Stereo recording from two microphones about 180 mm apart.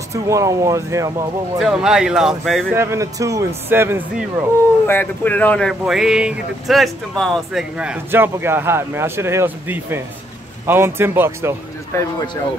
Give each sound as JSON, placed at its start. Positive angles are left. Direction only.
{"t": 0.1, "sound": "speech", "side_deg": -15}
{"t": 1.6, "sound": "speech", "side_deg": -5}
{"t": 2.7, "sound": "speech", "side_deg": -15}
{"t": 4.8, "sound": "speech", "side_deg": 10}
{"t": 11.9, "sound": "speech", "side_deg": 15}